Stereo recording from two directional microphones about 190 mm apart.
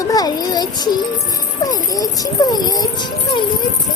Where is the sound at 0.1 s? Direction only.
20° left (ahead or behind).